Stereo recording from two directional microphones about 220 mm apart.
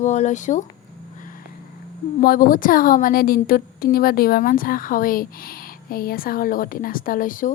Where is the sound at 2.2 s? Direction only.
40° left (ahead or behind).